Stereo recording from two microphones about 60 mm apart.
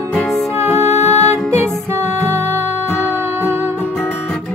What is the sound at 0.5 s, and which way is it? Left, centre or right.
Music, right.